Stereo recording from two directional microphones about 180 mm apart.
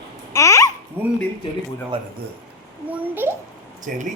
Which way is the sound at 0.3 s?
15° left (ahead or behind).